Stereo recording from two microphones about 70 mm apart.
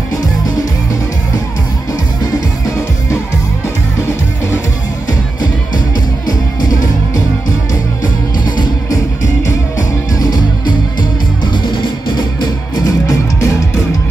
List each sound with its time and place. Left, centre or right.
6.2 s music: left
8.5 s music: left
10.1 s music: left
11.5 s music: left